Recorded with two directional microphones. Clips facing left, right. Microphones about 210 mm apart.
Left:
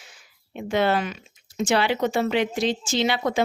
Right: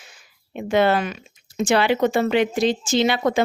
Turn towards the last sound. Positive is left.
turn(degrees=-50)  # may be behind; listen again after turning